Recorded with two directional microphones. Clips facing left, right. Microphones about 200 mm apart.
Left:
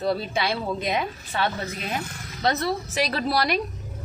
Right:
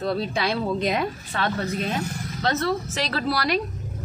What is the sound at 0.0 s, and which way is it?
A woman's voice, 5° left (ahead or behind).